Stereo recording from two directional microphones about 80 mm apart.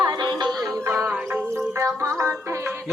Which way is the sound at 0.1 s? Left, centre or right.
Right.